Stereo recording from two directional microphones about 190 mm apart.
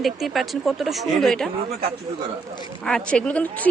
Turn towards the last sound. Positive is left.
turn(degrees=5)  # may be behind; listen again after turning